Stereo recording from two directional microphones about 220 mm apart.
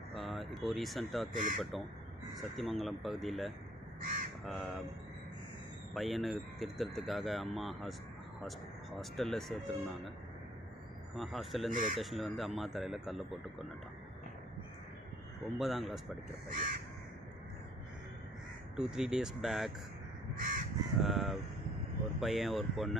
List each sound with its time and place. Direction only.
0.1 s speech: centre (ahead or behind)
1.3 s crow: 35° right (ahead or behind)
1.6 s speech: centre (ahead or behind)
5.9 s speech: centre (ahead or behind)
11.1 s speech: centre (ahead or behind)
11.7 s crow: 35° right (ahead or behind)
12.0 s speech: centre (ahead or behind)
15.4 s speech: centre (ahead or behind)
16.4 s crow: 40° right (ahead or behind)
18.8 s speech: 5° right (ahead or behind)
20.3 s crow: 40° right (ahead or behind)
21.0 s speech: centre (ahead or behind)